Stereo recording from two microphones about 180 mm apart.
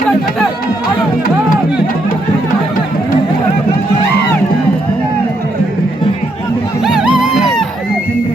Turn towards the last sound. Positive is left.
turn(degrees=0)  # may be behind; listen again after turning